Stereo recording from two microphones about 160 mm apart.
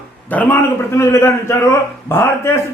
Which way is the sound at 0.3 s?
10° left (ahead or behind).